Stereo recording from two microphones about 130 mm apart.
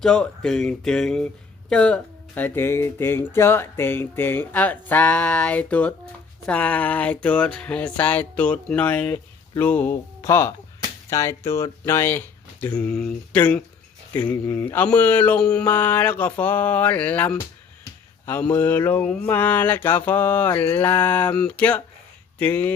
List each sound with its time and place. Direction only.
0.0 s speech: 5° left (ahead or behind)